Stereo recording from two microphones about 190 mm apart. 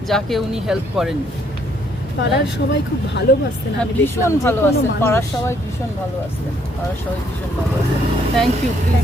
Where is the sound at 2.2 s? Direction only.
65° left (ahead or behind).